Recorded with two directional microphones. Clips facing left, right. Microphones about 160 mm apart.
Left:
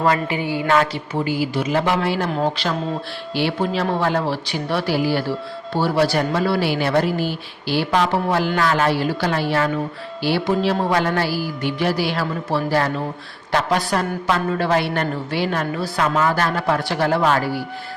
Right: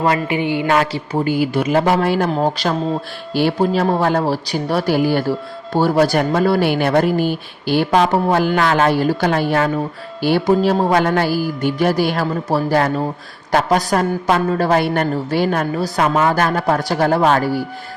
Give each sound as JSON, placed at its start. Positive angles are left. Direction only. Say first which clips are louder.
{"t": 0.3, "sound": "music", "louder": "right 3 dB", "side_deg": -20}
{"t": 1.2, "sound": "a woman's voice", "louder": "right 4 dB", "side_deg": -55}